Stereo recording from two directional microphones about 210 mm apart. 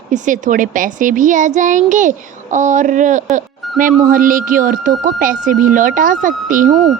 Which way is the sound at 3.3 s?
40° right (ahead or behind).